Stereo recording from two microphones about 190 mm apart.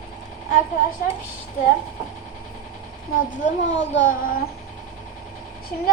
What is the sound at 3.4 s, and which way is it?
Speech, 40° left (ahead or behind).